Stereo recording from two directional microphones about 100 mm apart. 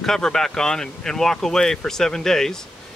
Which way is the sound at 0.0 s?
5° left (ahead or behind).